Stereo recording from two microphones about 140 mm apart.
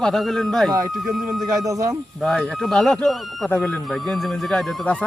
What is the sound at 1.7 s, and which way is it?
Speech, 25° right (ahead or behind).